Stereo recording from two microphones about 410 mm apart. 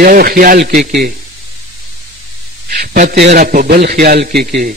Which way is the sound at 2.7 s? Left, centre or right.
Right.